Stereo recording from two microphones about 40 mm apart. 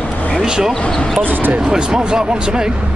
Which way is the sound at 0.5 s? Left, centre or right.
Right.